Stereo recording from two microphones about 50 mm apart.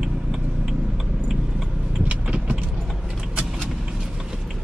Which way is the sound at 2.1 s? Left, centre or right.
Right.